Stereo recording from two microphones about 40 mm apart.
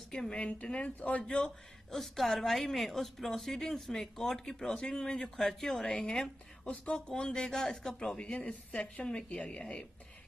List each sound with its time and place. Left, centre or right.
0.3 s speech: left
1.2 s speech: centre
2.0 s a woman's voice: centre
6.7 s speech: left
8.2 s speech: left